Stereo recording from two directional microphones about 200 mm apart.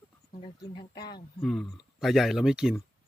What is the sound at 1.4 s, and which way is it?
Speech, centre (ahead or behind).